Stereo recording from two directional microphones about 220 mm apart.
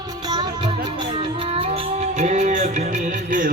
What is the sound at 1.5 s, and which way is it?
Music, 25° right (ahead or behind).